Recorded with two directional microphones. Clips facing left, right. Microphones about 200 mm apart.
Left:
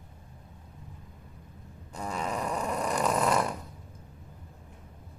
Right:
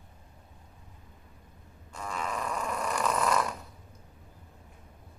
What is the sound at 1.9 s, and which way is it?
Snoring, 30° left (ahead or behind).